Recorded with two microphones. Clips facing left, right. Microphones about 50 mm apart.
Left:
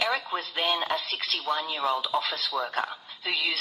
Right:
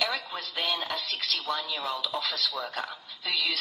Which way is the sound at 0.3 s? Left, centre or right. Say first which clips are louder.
Left 4 dB; left.